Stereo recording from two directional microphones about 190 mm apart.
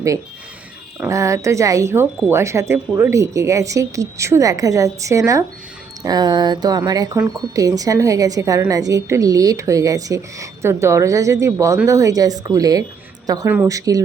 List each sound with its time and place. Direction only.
0.9 s speech: 15° right (ahead or behind)